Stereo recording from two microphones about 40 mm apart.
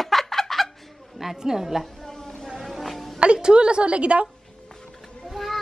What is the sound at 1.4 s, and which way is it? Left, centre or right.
Speech, centre.